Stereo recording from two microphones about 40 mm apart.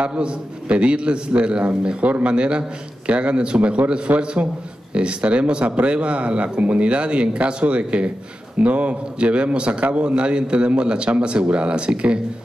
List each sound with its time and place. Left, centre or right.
0.0 s a man's voice: right
2.0 s a man's voice: right
4.2 s a man's voice: right